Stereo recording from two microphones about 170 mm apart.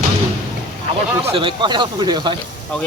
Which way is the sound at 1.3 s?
30° right (ahead or behind).